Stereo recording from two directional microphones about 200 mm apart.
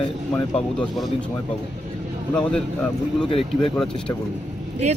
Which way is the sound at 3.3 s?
25° left (ahead or behind).